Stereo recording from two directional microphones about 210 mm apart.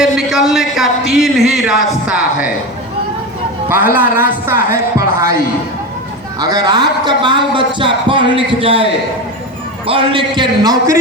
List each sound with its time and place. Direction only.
0.0 s speech: centre (ahead or behind)
3.7 s speech: 10° right (ahead or behind)
6.4 s a man's voice: 20° right (ahead or behind)